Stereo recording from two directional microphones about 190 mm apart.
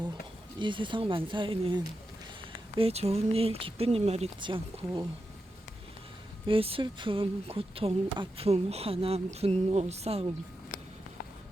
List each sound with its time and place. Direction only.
0.6 s speech: 25° right (ahead or behind)
6.5 s speech: 30° right (ahead or behind)